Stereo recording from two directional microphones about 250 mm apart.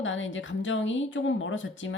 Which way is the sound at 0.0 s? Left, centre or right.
Left.